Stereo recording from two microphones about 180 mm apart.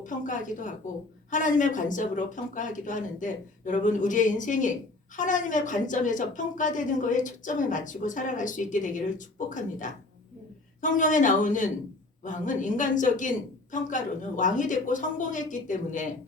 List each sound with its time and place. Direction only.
0.0 s a woman's voice: 45° left (ahead or behind)